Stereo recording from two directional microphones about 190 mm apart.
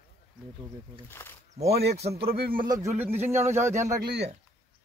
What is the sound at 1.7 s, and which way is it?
Speech, 60° right (ahead or behind).